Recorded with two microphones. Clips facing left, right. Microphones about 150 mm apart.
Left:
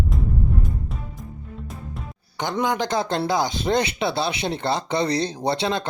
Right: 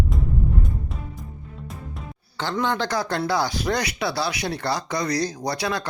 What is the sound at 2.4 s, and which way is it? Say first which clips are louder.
Speech: left 1 dB; 15° left (ahead or behind).